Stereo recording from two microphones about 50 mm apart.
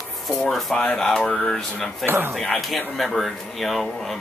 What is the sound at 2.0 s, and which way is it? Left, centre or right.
Speech, right.